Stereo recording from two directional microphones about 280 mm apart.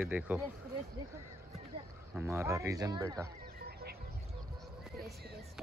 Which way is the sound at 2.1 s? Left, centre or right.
Centre.